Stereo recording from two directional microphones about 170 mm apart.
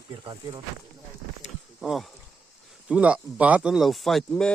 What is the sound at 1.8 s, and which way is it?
Speech, centre (ahead or behind).